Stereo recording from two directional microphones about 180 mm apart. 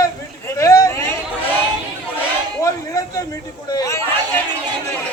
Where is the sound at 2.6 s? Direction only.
20° left (ahead or behind).